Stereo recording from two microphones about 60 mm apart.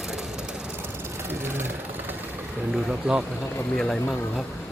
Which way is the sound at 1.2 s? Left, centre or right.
Right.